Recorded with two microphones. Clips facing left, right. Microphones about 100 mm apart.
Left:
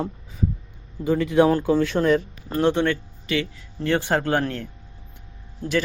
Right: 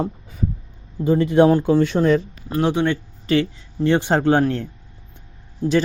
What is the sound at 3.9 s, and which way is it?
Speech, 20° right (ahead or behind).